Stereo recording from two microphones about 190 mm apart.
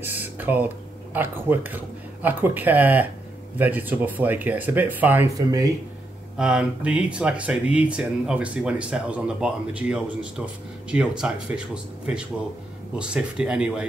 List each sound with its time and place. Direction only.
0.0 s speech: 10° right (ahead or behind)
6.3 s speech: 5° right (ahead or behind)